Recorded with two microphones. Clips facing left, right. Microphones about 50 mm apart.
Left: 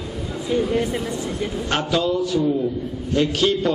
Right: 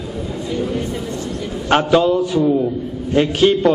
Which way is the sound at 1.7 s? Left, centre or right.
Right.